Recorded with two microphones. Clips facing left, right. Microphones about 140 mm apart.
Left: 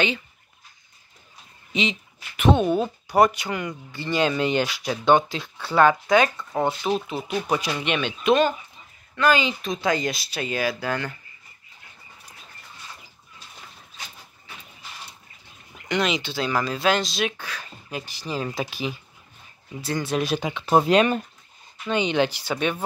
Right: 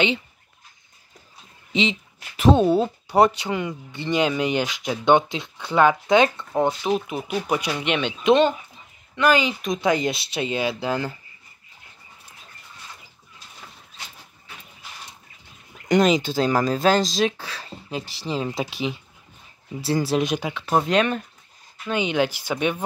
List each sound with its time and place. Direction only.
1.7 s speech: 25° right (ahead or behind)
6.9 s speech: 15° right (ahead or behind)
15.9 s speech: 40° right (ahead or behind)
20.4 s speech: centre (ahead or behind)
21.8 s speech: 5° right (ahead or behind)